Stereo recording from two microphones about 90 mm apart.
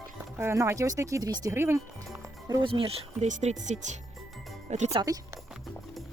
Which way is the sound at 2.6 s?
80° right.